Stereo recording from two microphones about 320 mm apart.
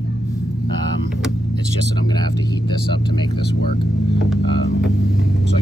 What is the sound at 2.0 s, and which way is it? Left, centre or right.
Speech, centre.